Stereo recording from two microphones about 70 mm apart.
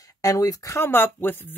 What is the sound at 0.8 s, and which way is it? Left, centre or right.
Speech, left.